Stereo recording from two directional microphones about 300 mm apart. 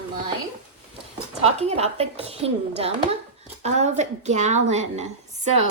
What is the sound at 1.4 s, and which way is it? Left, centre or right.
A woman's voice, right.